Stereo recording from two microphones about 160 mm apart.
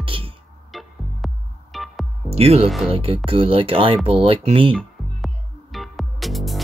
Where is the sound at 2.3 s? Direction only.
40° right (ahead or behind).